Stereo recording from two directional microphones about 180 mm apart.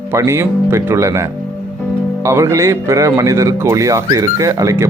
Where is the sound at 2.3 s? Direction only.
15° right (ahead or behind).